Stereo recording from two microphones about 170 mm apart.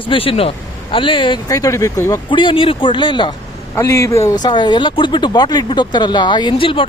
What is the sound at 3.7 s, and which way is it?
A man's voice, 15° left (ahead or behind).